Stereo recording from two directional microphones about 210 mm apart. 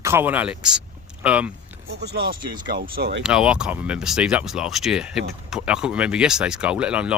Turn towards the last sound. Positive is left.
turn(degrees=-5)  # may be behind; listen again after turning